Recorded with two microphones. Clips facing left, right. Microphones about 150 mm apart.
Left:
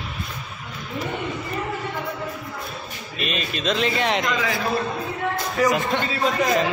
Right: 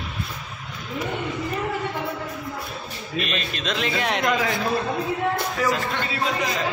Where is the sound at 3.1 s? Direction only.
Centre (ahead or behind).